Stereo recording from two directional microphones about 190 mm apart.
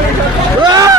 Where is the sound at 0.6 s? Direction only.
20° right (ahead or behind).